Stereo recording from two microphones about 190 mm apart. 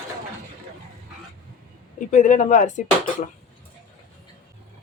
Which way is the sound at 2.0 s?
40° left (ahead or behind).